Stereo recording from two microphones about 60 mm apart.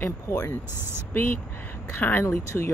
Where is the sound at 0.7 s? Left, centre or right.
Right.